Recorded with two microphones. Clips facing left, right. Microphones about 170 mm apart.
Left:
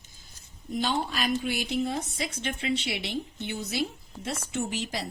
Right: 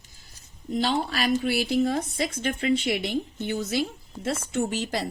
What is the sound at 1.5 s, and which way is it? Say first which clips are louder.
Speech: right 5 dB; 65° right (ahead or behind).